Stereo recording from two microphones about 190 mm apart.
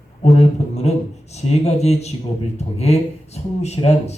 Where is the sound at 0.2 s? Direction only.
35° left (ahead or behind).